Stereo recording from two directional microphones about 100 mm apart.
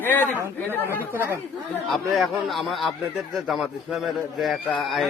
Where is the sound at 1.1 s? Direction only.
20° right (ahead or behind).